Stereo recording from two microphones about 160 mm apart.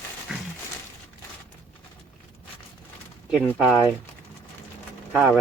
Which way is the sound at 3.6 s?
Centre (ahead or behind).